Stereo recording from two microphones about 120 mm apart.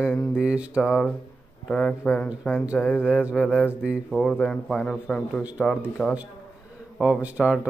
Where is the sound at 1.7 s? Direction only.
10° left (ahead or behind).